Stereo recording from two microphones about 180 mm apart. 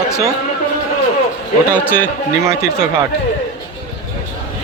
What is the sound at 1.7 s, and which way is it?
Speech, 10° left (ahead or behind).